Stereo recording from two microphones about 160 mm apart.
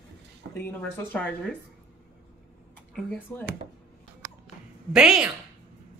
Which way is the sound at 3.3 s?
10° left (ahead or behind).